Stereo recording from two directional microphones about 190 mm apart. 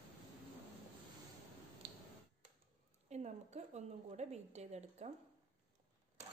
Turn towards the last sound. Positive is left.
turn(degrees=-35)  # may be behind; listen again after turning